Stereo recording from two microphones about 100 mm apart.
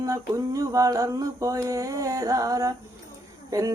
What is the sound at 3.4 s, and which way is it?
Speech, 35° right (ahead or behind).